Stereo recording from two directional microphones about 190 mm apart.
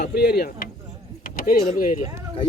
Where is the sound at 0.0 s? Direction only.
55° left (ahead or behind).